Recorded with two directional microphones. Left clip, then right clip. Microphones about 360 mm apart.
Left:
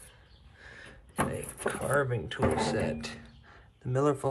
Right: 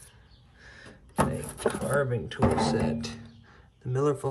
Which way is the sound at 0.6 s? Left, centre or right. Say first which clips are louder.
Even; centre.